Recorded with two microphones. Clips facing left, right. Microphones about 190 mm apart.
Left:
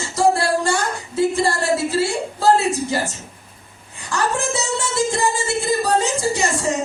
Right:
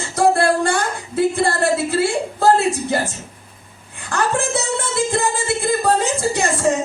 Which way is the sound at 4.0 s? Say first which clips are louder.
Right 2 dB; 55° right (ahead or behind).